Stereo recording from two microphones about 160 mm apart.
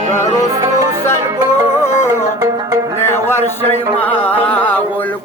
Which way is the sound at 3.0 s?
15° left (ahead or behind).